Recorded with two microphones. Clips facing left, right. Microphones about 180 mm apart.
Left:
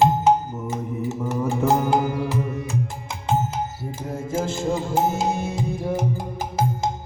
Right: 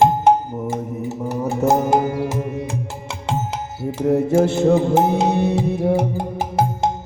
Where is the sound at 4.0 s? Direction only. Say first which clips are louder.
Right 11 dB; 70° right (ahead or behind).